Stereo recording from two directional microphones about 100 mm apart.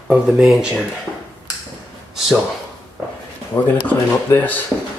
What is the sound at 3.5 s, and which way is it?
Speech, 15° left (ahead or behind).